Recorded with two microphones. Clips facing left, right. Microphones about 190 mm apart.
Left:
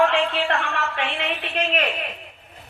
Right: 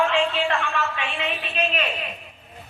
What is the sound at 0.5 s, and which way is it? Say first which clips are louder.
Speech: even; 65° left (ahead or behind).